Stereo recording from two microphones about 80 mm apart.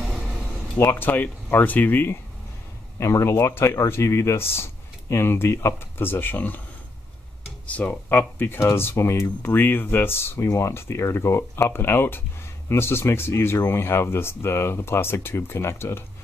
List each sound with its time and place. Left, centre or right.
0.7 s speech: left
3.0 s speech: left
7.6 s speech: centre